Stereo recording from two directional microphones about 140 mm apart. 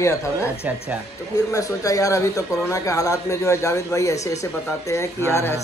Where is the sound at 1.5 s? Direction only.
25° left (ahead or behind).